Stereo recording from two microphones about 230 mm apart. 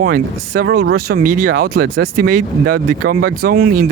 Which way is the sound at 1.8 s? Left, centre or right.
Right.